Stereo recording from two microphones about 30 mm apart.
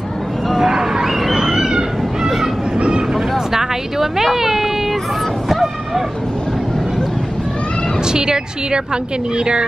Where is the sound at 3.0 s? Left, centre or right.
Centre.